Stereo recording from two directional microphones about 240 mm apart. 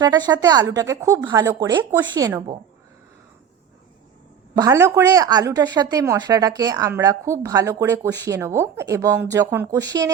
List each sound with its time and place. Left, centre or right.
0.0 s speech: centre
4.5 s speech: centre